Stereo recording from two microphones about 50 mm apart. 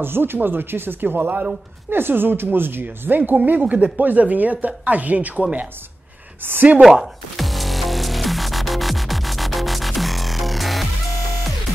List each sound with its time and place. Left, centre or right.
0.0 s speech: right
3.4 s speech: right
6.4 s speech: right
6.8 s music: centre